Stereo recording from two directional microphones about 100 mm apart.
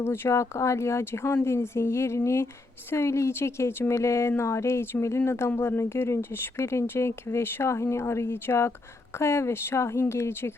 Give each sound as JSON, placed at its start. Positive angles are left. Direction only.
{"t": 0.0, "sound": "a woman's voice", "side_deg": 25}